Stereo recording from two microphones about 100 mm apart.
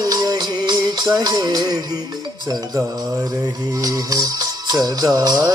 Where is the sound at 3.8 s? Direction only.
35° right (ahead or behind).